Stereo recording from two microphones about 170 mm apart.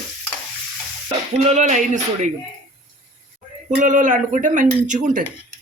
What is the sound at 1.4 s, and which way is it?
Speech, 45° right (ahead or behind).